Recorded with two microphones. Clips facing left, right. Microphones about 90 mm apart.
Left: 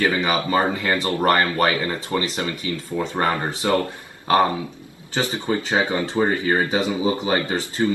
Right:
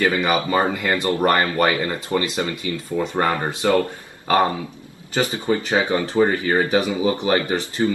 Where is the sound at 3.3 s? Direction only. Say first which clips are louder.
Right 2 dB; 25° right (ahead or behind).